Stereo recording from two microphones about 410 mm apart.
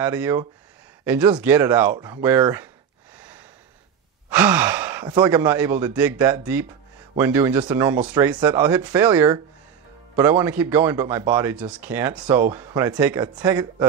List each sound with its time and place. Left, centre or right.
0.0 s speech: centre
3.2 s a sound: centre
4.3 s speech: centre